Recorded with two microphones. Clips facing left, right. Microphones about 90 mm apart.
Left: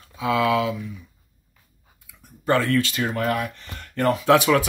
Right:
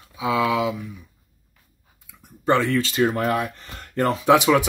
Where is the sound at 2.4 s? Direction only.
20° right (ahead or behind).